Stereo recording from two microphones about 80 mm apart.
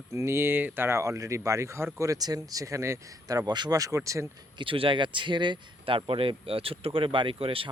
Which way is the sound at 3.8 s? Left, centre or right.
Right.